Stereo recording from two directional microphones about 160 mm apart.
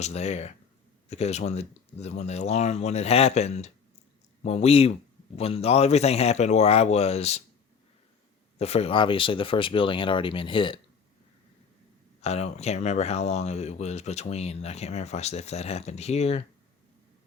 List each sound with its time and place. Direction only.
0.0 s speech: 45° left (ahead or behind)
8.5 s speech: 40° left (ahead or behind)
12.2 s speech: 40° left (ahead or behind)